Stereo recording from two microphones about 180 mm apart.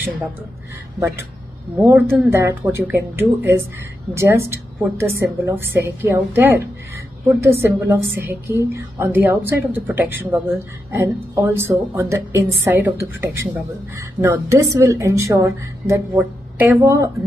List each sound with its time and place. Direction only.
0.9 s a woman's voice: 15° right (ahead or behind)